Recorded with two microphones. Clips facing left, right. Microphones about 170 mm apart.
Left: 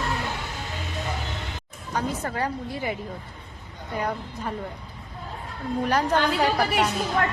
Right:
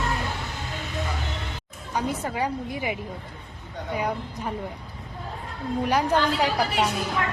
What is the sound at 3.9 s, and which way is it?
Speech, 10° right (ahead or behind).